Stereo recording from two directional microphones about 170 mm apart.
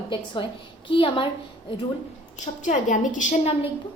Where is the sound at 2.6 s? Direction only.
45° left (ahead or behind).